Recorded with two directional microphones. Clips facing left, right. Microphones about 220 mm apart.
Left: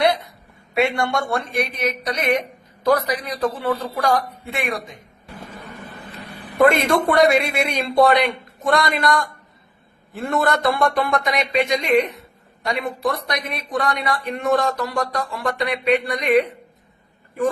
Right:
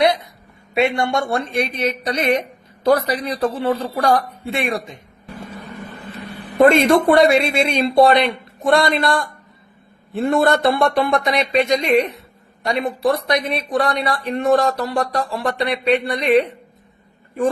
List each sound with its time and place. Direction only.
0.7 s a man's voice: 20° right (ahead or behind)
6.6 s a man's voice: 25° right (ahead or behind)
10.2 s speech: 30° right (ahead or behind)